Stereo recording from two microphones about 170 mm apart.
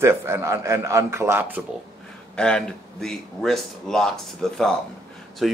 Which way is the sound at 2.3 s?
5° left (ahead or behind).